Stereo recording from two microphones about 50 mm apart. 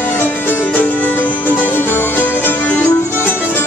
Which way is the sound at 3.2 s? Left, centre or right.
Left.